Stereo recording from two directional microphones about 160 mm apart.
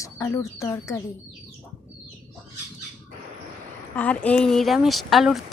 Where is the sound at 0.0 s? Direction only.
20° left (ahead or behind).